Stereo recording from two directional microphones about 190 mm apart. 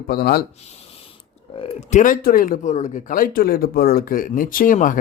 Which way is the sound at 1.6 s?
40° left (ahead or behind).